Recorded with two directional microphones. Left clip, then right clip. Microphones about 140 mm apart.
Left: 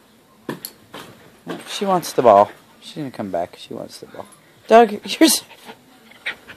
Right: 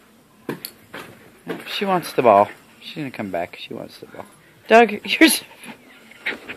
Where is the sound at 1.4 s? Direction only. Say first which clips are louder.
Even; 30° left (ahead or behind).